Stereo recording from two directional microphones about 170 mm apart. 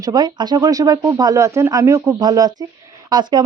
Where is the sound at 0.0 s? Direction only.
25° right (ahead or behind).